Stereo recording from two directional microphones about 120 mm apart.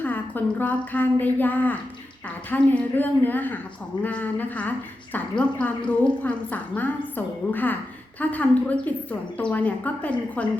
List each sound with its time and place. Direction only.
0.0 s a woman's voice: 15° left (ahead or behind)